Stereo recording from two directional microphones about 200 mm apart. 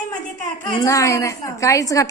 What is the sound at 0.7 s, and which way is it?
A woman's voice, 15° left (ahead or behind).